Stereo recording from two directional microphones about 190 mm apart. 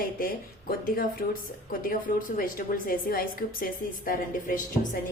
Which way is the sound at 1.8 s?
50° left (ahead or behind).